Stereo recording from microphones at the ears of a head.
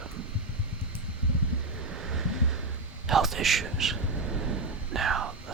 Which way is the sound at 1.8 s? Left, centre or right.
Right.